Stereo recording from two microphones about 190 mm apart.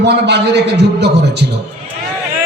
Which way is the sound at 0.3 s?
60° right (ahead or behind).